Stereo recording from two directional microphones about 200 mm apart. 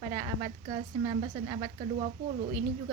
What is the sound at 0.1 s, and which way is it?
A woman's voice, 30° right (ahead or behind).